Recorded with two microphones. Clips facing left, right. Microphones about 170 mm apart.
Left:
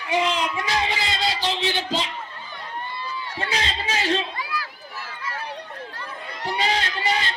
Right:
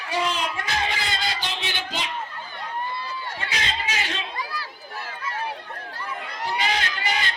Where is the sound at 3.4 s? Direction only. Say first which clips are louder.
Left 4 dB; 30° left (ahead or behind).